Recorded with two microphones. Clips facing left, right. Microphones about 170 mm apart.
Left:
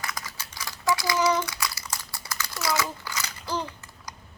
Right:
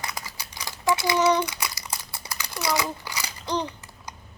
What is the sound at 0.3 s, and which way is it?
Typing, 15° right (ahead or behind).